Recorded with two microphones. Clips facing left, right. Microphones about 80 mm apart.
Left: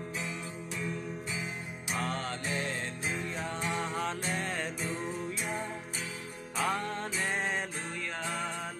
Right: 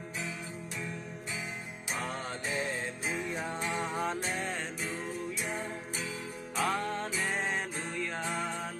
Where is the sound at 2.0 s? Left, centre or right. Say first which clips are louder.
Left 3 dB; centre.